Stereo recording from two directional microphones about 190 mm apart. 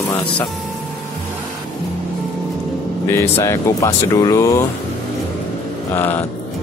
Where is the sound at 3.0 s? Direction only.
15° left (ahead or behind).